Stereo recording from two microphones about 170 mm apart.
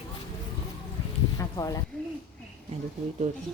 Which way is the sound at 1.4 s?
20° left (ahead or behind).